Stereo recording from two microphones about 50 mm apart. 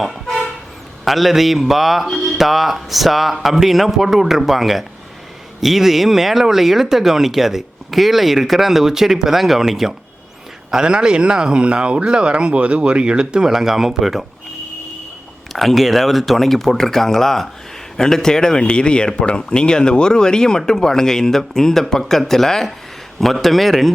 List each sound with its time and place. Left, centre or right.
0.0 s toot: centre
1.0 s speech: centre
15.5 s speech: centre